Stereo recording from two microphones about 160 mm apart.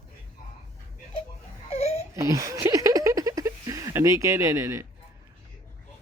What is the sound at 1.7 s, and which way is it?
Crying, 40° left (ahead or behind).